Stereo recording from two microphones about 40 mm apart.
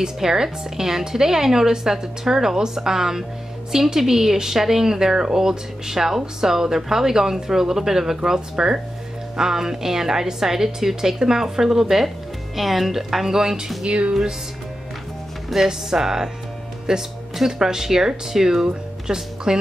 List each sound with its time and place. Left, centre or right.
0.0 s speech: centre
13.8 s speech: right
15.5 s speech: centre